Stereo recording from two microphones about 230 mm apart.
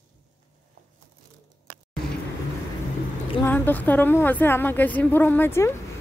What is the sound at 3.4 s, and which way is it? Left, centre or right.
A woman's voice, centre.